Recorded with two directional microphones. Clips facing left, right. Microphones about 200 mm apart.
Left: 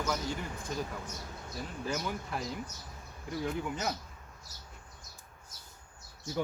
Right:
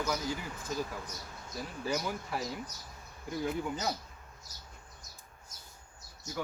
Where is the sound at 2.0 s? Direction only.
5° right (ahead or behind).